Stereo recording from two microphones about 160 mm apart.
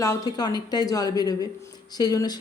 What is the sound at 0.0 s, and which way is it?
Speech, 20° left (ahead or behind).